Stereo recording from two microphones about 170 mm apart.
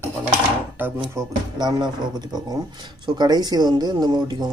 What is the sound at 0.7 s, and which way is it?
Speech, 10° right (ahead or behind).